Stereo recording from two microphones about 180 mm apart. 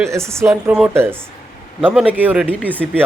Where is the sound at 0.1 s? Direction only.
15° right (ahead or behind).